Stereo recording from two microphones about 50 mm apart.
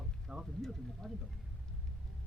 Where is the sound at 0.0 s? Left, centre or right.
Centre.